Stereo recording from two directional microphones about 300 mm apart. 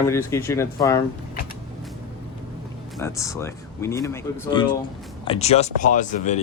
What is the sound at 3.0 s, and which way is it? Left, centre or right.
Speech, centre.